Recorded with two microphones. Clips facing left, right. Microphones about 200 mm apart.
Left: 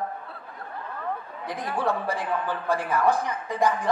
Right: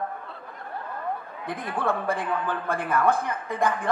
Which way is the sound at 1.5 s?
55° right (ahead or behind).